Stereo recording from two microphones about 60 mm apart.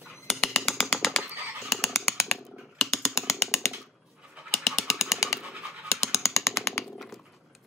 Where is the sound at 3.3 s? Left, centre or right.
Left.